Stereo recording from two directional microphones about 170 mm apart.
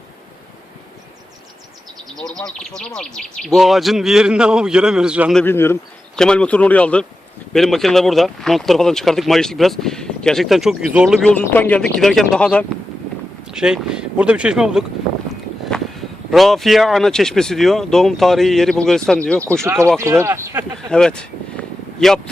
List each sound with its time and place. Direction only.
2.1 s speech: 5° left (ahead or behind)
5.4 s speech: 15° left (ahead or behind)
13.5 s speech: 5° right (ahead or behind)
15.7 s a sound: 5° left (ahead or behind)
16.3 s speech: centre (ahead or behind)
19.6 s speech: 15° right (ahead or behind)
20.9 s speech: 5° left (ahead or behind)